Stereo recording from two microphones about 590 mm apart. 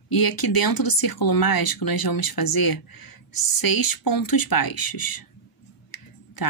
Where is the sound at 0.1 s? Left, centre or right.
Left.